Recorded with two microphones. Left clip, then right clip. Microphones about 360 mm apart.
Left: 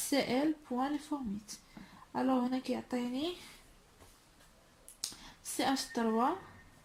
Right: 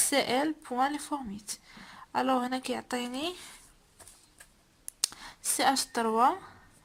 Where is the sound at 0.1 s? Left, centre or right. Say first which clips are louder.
Right 4 dB; right.